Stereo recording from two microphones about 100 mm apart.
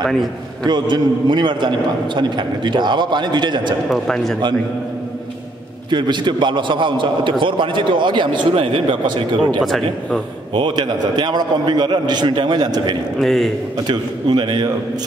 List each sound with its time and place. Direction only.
0.7 s a man's voice: 45° right (ahead or behind)
3.9 s speech: 5° left (ahead or behind)
5.9 s a man's voice: 50° right (ahead or behind)
9.6 s speech: centre (ahead or behind)
10.5 s a man's voice: 55° right (ahead or behind)
13.2 s speech: centre (ahead or behind)
13.8 s a man's voice: 50° right (ahead or behind)